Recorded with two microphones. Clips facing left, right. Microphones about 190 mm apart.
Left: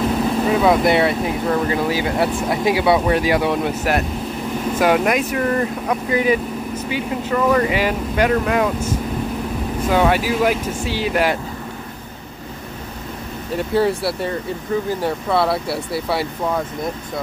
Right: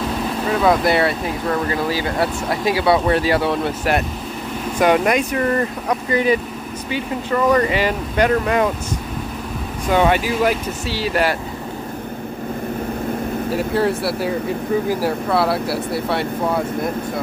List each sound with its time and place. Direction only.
0.5 s speech: 10° left (ahead or behind)
4.7 s speech: 5° left (ahead or behind)
7.5 s speech: 5° left (ahead or behind)
9.8 s speech: 5° left (ahead or behind)
13.6 s speech: centre (ahead or behind)